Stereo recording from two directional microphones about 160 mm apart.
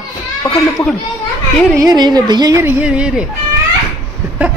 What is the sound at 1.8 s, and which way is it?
Speech, 25° right (ahead or behind).